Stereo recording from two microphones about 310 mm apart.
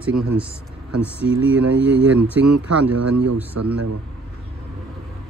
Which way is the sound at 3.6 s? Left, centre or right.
Right.